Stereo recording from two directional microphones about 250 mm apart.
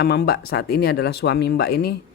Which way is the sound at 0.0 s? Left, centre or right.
Left.